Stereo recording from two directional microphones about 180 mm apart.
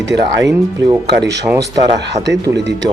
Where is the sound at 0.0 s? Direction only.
80° right.